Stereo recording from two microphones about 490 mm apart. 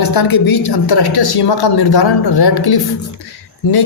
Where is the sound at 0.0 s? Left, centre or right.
Left.